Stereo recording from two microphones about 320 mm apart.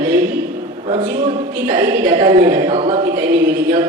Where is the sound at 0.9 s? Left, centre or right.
Centre.